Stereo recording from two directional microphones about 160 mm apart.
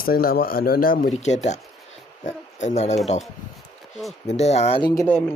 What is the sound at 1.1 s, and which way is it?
Speech, 45° left (ahead or behind).